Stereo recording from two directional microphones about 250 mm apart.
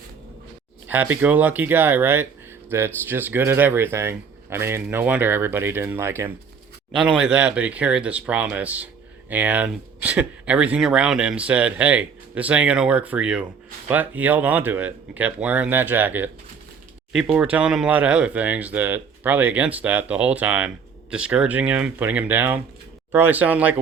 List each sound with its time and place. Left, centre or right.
0.9 s speech: centre